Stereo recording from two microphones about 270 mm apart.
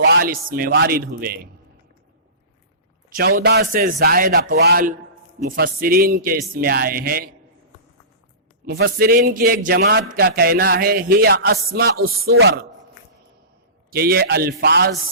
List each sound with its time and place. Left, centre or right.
0.0 s a man's voice: right
3.1 s a man's voice: right
8.6 s a man's voice: right
13.9 s a man's voice: right